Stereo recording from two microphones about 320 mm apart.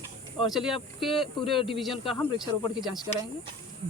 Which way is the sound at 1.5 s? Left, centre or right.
Centre.